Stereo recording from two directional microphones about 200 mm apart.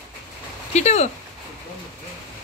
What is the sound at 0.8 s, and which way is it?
Speech, 35° left (ahead or behind).